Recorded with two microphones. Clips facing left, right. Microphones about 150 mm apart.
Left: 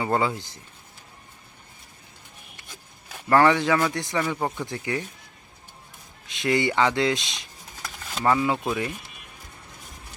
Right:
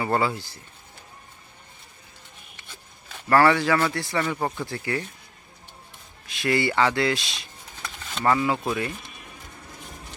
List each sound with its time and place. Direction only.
0.0 s speech: 15° left (ahead or behind)
2.6 s zipper: 10° left (ahead or behind)
3.9 s speech: 15° left (ahead or behind)
4.4 s speech: centre (ahead or behind)
4.6 s speech: 15° left (ahead or behind)
6.2 s speech: 20° left (ahead or behind)
8.1 s speech: 10° left (ahead or behind)